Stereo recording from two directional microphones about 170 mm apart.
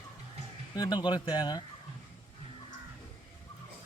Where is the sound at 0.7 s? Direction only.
25° left (ahead or behind).